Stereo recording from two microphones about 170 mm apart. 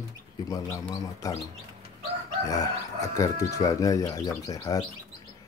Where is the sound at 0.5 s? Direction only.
20° left (ahead or behind).